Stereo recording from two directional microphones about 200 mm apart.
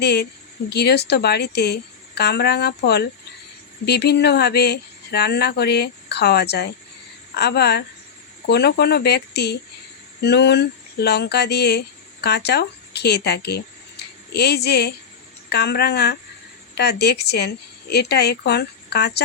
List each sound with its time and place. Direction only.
0.0 s speech: 55° left (ahead or behind)